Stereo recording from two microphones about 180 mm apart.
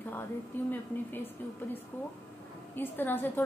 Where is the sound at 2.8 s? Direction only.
10° left (ahead or behind).